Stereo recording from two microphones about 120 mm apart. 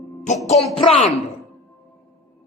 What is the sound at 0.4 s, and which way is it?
Speech, 65° left (ahead or behind).